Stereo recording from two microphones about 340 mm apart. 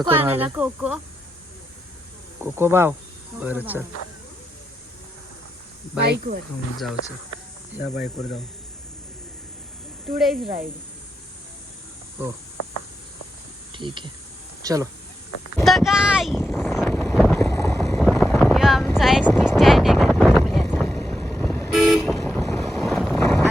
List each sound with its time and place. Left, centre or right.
0.0 s speech: centre
2.4 s speech: centre
6.0 s speech: right
8.0 s speech: centre
10.2 s speech: centre
12.2 s speech: centre
13.7 s speech: centre
15.5 s vehicle: centre